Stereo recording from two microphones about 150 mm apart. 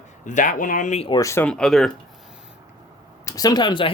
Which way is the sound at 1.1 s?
20° left (ahead or behind).